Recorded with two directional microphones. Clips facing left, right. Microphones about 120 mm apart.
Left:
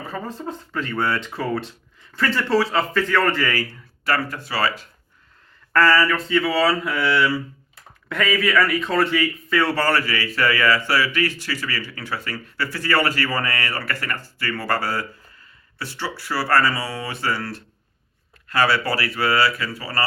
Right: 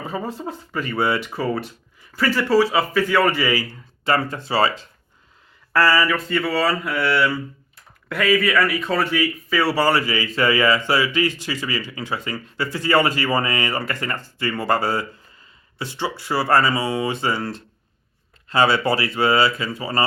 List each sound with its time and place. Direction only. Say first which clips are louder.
0.1 s speech: right 1 dB; 15° right (ahead or behind)
5.7 s a man's voice: left 1 dB; 10° right (ahead or behind)